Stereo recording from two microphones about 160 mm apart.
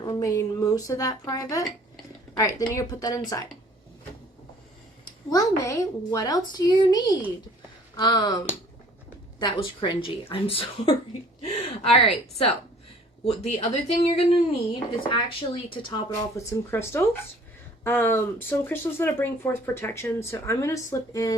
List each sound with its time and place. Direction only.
0.0 s speech: 25° left (ahead or behind)
5.0 s speech: 20° left (ahead or behind)